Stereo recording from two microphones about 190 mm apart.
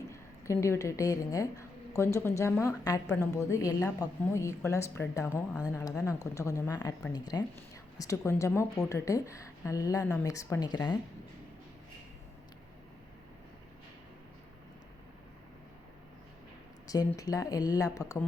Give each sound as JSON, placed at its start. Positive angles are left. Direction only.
{"t": 0.1, "sound": "a woman's voice", "side_deg": 15}
{"t": 16.8, "sound": "a sound", "side_deg": 20}
{"t": 17.2, "sound": "speech", "side_deg": 20}